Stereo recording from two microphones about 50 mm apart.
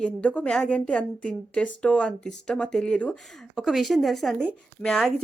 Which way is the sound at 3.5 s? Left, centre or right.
Centre.